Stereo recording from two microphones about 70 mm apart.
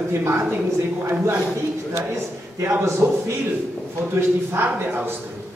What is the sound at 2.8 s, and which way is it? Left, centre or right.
Speech, right.